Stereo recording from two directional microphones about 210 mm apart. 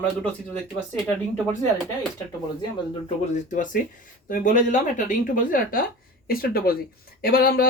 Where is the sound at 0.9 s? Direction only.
5° left (ahead or behind).